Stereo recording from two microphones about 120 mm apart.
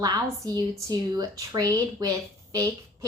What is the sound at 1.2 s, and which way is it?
A woman's voice, 30° right (ahead or behind).